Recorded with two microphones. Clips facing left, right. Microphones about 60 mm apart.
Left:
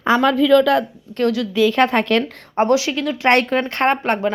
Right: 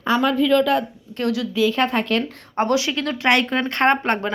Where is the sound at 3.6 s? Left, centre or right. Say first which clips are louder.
Even; left.